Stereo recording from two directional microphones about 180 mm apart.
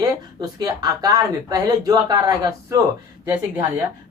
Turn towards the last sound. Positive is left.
turn(degrees=-15)  # may be behind; listen again after turning